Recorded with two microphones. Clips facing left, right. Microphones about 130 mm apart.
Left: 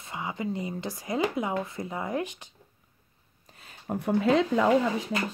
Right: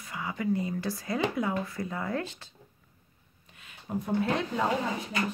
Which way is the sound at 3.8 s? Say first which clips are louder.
Left 4 dB; 70° left (ahead or behind).